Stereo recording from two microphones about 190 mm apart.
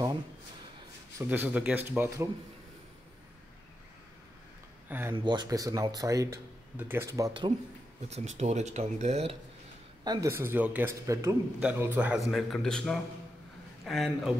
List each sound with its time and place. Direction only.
1.1 s speech: 10° right (ahead or behind)
4.8 s speech: 10° right (ahead or behind)
5.1 s speech: 25° right (ahead or behind)
8.1 s speech: 35° right (ahead or behind)
10.0 s a man's voice: 20° right (ahead or behind); by 14.3 s centre (ahead or behind)